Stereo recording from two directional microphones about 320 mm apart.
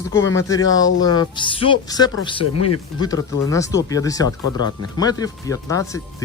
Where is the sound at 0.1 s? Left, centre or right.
Centre.